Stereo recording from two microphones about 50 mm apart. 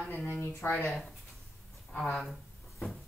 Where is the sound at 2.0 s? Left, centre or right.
Centre.